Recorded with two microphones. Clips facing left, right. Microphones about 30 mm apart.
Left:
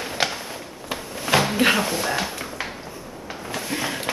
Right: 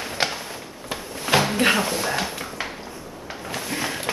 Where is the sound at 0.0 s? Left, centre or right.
Centre.